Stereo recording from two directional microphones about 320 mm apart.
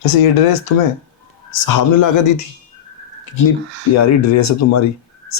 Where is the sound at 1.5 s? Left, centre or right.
Left.